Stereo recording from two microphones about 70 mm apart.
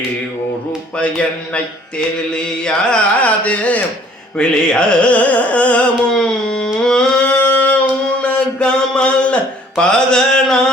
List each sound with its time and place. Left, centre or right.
0.9 s carnatic music: centre
6.8 s a sound: centre
7.3 s singing: left
8.2 s mantra: centre